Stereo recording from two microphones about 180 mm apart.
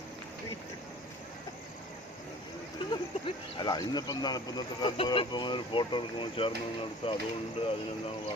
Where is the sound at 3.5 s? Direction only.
25° left (ahead or behind).